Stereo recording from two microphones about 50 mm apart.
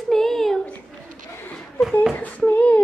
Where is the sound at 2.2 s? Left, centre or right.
Left.